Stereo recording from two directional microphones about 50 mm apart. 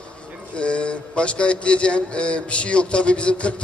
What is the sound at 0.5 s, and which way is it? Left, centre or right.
Speech, left.